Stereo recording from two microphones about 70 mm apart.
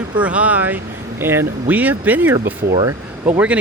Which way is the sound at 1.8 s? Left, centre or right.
Right.